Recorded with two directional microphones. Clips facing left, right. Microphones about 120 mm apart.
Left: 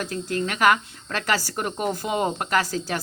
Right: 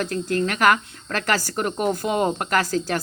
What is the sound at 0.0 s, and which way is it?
Speech, 50° right (ahead or behind).